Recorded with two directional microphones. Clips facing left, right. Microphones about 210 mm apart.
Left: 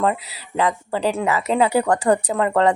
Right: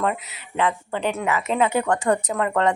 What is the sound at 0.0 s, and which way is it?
Speech, 35° left (ahead or behind).